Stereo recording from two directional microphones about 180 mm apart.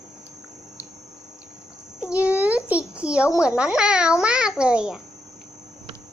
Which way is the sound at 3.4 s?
5° right (ahead or behind).